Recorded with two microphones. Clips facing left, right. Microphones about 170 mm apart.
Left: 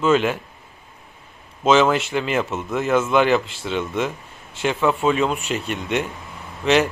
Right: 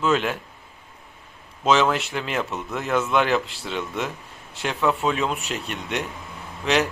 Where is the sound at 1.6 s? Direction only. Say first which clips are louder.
Left 4 dB; centre (ahead or behind).